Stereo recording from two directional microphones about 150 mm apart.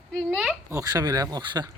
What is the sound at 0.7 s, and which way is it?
Speech, 20° right (ahead or behind).